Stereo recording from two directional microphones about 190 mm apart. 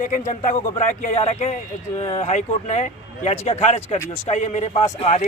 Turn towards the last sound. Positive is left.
turn(degrees=35)  # may be behind; listen again after turning